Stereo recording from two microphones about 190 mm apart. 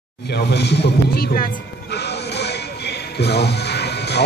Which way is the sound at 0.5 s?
60° left (ahead or behind).